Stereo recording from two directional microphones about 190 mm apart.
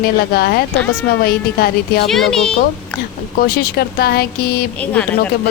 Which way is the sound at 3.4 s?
55° left (ahead or behind).